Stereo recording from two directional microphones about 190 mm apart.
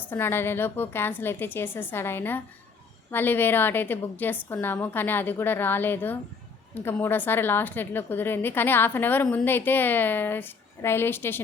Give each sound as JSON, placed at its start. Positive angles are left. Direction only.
{"t": 0.1, "sound": "a woman's voice", "side_deg": 10}